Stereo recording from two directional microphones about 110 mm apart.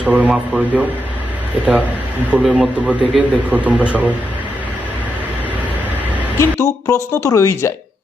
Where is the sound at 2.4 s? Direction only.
10° right (ahead or behind).